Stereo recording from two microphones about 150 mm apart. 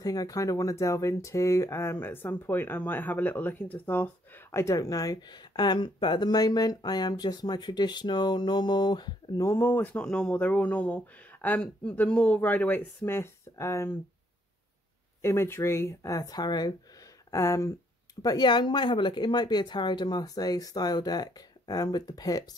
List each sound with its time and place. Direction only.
0.0 s speech: 25° left (ahead or behind)
15.2 s speech: 15° left (ahead or behind)